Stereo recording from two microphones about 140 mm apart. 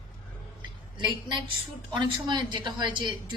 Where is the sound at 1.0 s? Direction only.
35° right (ahead or behind).